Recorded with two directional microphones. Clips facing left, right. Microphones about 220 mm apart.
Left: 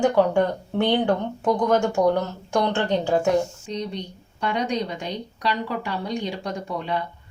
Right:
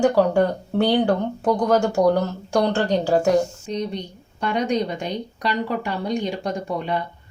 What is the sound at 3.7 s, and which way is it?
A woman's voice, 50° right (ahead or behind).